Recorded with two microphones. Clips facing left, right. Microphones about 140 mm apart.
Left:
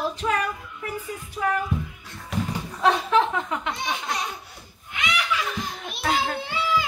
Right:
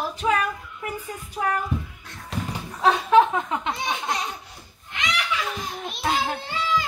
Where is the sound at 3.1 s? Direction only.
25° right (ahead or behind).